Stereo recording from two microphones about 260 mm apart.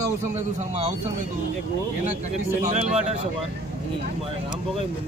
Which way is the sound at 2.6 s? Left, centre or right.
Right.